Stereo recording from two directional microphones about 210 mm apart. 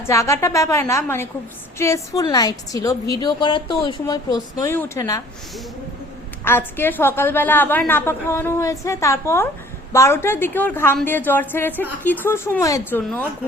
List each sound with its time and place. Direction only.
0.1 s a woman's voice: 15° left (ahead or behind)
6.4 s a woman's voice: 10° left (ahead or behind)